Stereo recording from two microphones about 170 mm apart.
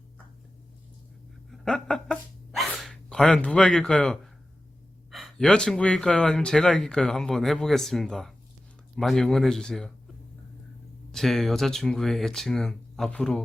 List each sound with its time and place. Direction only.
1.5 s a sound: 5° left (ahead or behind)
2.6 s speech: centre (ahead or behind)
11.1 s speech: centre (ahead or behind)